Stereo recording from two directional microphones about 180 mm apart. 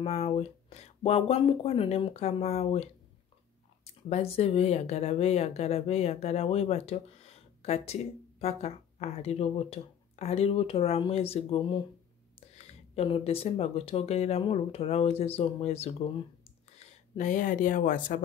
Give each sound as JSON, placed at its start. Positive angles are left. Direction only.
{"t": 0.0, "sound": "speech", "side_deg": 35}
{"t": 4.1, "sound": "speech", "side_deg": 35}